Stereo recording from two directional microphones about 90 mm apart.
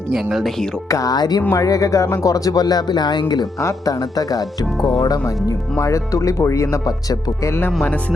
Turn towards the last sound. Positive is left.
turn(degrees=25)  # may be behind; listen again after turning